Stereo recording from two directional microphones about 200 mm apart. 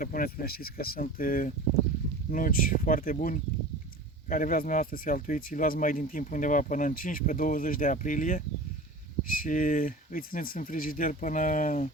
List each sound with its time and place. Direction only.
0.0 s speech: 45° left (ahead or behind)